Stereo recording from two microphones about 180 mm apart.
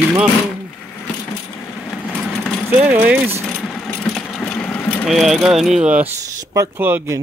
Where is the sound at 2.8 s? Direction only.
10° right (ahead or behind).